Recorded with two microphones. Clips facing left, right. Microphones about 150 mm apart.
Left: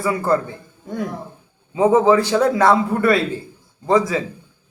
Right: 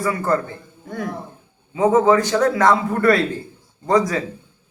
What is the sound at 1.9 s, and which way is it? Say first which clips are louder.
A man's voice: left 1 dB; 10° left (ahead or behind).